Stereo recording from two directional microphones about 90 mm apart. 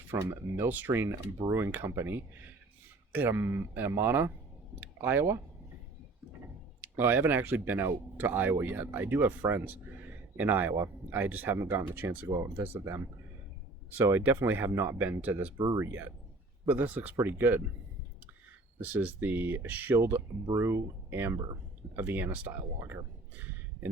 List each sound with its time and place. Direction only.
0.5 s speech: 25° right (ahead or behind)
1.1 s speech: 35° right (ahead or behind)
6.8 s speech: 25° right (ahead or behind)
12.3 s speech: 35° right (ahead or behind)
14.3 s speech: 20° right (ahead or behind)
15.5 s speech: 55° right (ahead or behind)
15.8 s speech: 25° right (ahead or behind)
18.8 s speech: 20° right (ahead or behind)
22.8 s speech: 35° right (ahead or behind)